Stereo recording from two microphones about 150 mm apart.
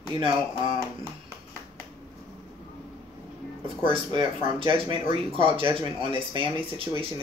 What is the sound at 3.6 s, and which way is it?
Speech, 35° right (ahead or behind).